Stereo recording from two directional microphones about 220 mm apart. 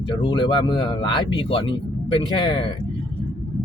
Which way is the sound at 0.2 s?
20° left (ahead or behind).